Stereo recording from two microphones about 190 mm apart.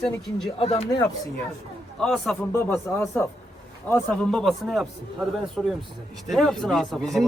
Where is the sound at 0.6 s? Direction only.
30° left (ahead or behind).